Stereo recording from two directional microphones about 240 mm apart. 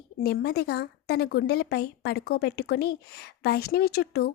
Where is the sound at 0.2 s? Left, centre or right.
Left.